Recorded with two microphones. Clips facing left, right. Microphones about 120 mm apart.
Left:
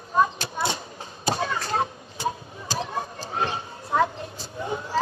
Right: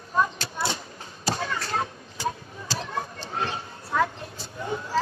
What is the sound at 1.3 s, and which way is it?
Chop, 20° left (ahead or behind).